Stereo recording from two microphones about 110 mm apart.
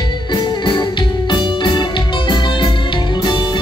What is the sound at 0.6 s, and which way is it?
Music, 45° left (ahead or behind).